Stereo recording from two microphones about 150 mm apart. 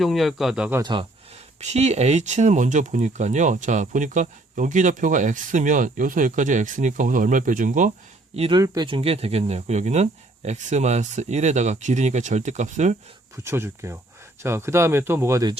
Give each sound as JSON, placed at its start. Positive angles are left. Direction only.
{"t": 0.0, "sound": "speech", "side_deg": 0}
{"t": 0.8, "sound": "speech", "side_deg": -30}
{"t": 1.6, "sound": "speech", "side_deg": -50}
{"t": 8.4, "sound": "speech", "side_deg": -35}
{"t": 8.9, "sound": "speech", "side_deg": -40}
{"t": 13.3, "sound": "speech", "side_deg": -15}